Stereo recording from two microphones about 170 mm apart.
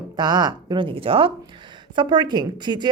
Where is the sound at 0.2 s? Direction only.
25° right (ahead or behind).